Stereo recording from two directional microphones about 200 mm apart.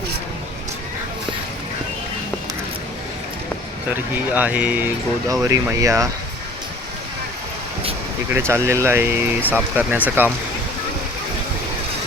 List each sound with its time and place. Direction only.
3.9 s speech: 10° right (ahead or behind)
8.3 s speech: 10° right (ahead or behind)